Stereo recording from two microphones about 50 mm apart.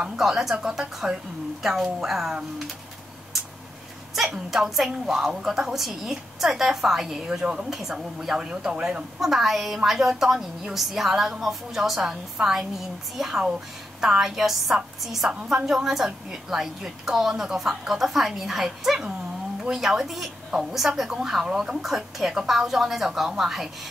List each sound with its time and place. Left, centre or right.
0.2 s a woman's voice: centre
4.1 s a woman's voice: centre
8.7 s a woman's voice: right
9.2 s a woman's voice: centre